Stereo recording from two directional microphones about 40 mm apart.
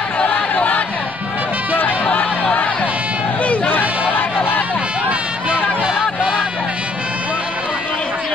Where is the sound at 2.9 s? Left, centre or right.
Right.